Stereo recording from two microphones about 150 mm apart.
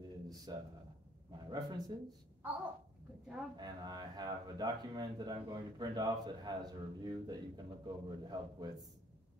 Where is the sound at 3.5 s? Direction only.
30° right (ahead or behind).